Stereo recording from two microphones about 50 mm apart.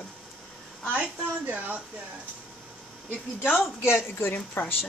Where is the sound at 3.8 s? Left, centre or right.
Left.